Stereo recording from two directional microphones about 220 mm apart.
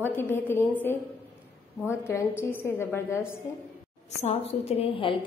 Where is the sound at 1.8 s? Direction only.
10° left (ahead or behind).